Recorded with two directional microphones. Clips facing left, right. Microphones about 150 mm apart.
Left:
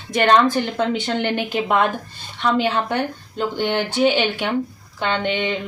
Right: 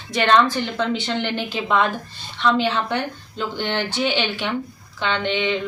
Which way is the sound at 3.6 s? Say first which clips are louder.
Left 3 dB; 10° left (ahead or behind).